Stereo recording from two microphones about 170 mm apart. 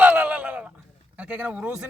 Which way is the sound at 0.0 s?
10° right (ahead or behind).